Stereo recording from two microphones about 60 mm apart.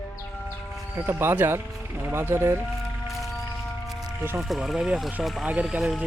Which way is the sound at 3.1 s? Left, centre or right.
Centre.